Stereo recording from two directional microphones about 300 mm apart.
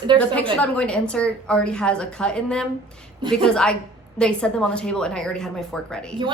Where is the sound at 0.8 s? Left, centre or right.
Centre.